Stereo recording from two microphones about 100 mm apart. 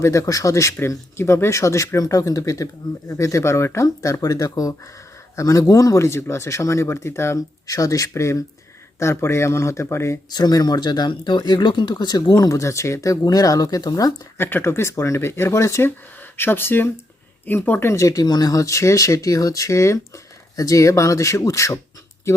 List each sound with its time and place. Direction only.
0.0 s speech: 30° left (ahead or behind)
10.2 s speech: 45° left (ahead or behind)
14.3 s speech: 25° left (ahead or behind)
17.9 s speech: 35° left (ahead or behind)